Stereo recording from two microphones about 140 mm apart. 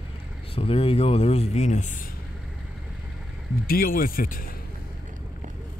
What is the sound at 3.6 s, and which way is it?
Speech, 90° left.